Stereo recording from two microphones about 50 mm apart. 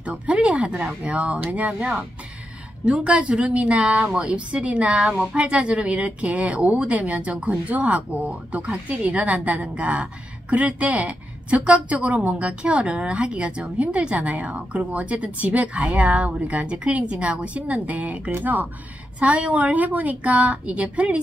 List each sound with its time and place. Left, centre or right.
0.0 s a woman's voice: right